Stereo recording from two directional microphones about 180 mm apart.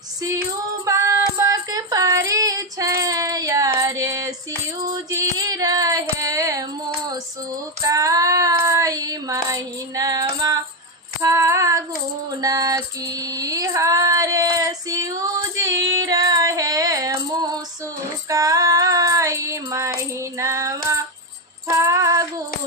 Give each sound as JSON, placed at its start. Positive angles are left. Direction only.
{"t": 0.9, "sound": "female singing", "side_deg": -15}
{"t": 4.8, "sound": "music", "side_deg": -15}
{"t": 7.8, "sound": "child singing", "side_deg": -20}
{"t": 11.2, "sound": "female singing", "side_deg": -15}
{"t": 12.4, "sound": "music", "side_deg": -20}
{"t": 13.3, "sound": "female singing", "side_deg": -20}
{"t": 21.7, "sound": "music", "side_deg": -15}